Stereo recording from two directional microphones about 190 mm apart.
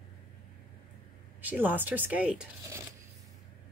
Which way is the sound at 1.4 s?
10° right (ahead or behind).